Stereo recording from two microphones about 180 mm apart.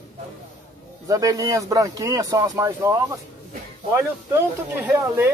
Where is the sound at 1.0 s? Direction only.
20° right (ahead or behind).